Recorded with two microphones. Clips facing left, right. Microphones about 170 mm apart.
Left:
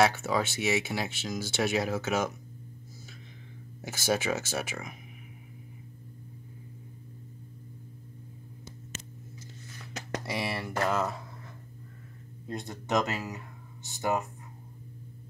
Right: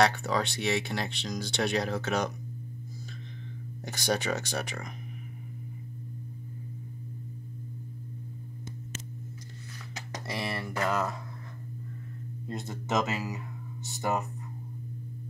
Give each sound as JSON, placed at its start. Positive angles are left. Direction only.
{"t": 0.0, "sound": "speech", "side_deg": 5}
{"t": 3.8, "sound": "speech", "side_deg": 5}
{"t": 10.3, "sound": "speech", "side_deg": 0}
{"t": 12.4, "sound": "speech", "side_deg": 0}